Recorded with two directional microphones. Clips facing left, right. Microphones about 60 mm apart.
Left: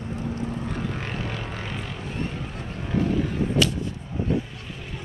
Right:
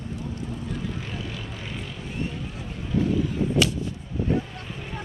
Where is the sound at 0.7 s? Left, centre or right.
Left.